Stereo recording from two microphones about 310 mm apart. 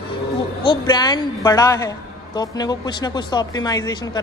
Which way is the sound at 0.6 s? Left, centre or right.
Centre.